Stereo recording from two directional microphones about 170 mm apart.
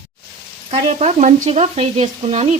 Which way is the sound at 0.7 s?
40° right (ahead or behind).